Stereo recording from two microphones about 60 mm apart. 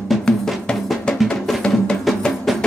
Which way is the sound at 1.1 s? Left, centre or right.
Centre.